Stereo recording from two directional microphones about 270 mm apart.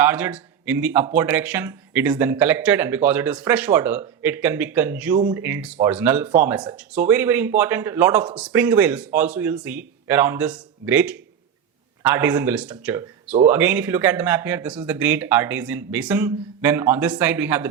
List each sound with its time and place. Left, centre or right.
0.0 s speech: centre